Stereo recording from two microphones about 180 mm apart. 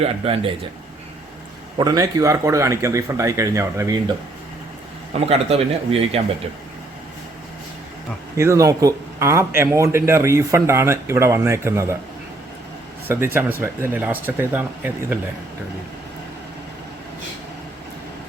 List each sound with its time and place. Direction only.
0.0 s speech: 30° right (ahead or behind)
1.8 s speech: 20° right (ahead or behind)
5.2 s speech: 35° right (ahead or behind)
8.4 s speech: 15° right (ahead or behind)
13.1 s speech: 10° right (ahead or behind)